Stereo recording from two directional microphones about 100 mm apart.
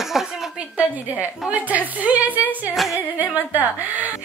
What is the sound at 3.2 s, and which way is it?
Speech, 15° right (ahead or behind).